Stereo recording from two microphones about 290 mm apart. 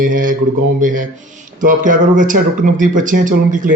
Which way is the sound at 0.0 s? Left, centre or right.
Right.